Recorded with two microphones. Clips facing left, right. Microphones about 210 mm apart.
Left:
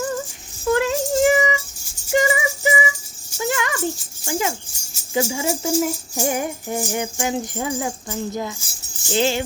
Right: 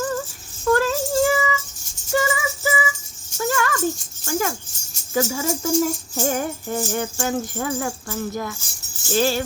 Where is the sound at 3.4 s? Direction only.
20° left (ahead or behind).